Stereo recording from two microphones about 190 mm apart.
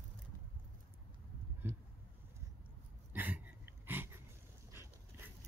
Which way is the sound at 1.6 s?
10° right (ahead or behind).